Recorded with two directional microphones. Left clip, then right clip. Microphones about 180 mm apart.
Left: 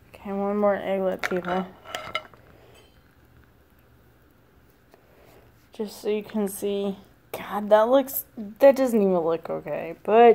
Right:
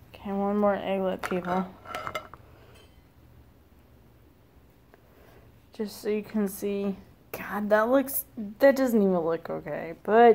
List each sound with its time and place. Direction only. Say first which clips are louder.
0.1 s speech: left 2 dB; 5° left (ahead or behind)
5.7 s speech: left 3 dB; 5° left (ahead or behind)